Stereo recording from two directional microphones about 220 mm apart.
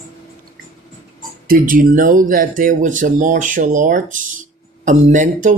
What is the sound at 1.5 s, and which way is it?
Speech, 40° right (ahead or behind).